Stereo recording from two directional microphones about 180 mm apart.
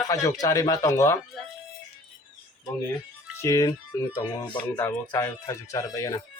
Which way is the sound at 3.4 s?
20° left (ahead or behind).